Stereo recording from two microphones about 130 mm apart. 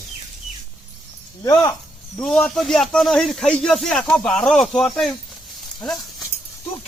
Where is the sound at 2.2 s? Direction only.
5° left (ahead or behind).